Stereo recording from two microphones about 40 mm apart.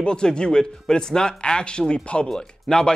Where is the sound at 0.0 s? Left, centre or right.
Left.